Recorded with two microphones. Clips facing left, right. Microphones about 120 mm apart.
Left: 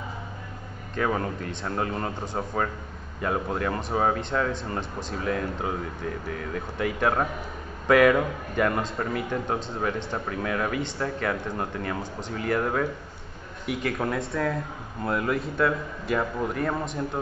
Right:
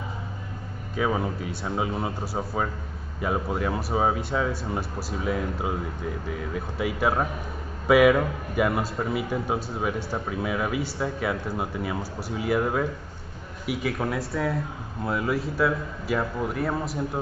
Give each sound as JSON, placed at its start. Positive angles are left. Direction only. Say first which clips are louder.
{"t": 0.9, "sound": "a man's voice", "louder": "right 1 dB", "side_deg": -5}